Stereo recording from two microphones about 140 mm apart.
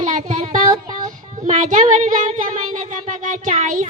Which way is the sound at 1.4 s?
60° right (ahead or behind).